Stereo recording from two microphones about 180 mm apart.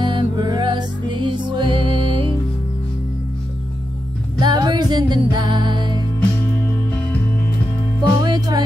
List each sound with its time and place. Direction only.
0.0 s music: 25° right (ahead or behind)
4.4 s music: 25° right (ahead or behind)
8.2 s music: 20° right (ahead or behind)